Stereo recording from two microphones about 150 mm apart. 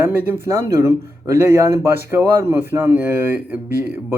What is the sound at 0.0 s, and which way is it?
Speech, 15° right (ahead or behind).